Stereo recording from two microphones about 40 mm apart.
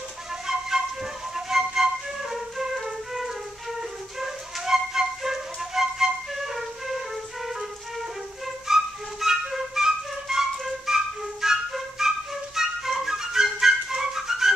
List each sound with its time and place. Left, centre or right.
0.5 s flute: centre
8.6 s flute: centre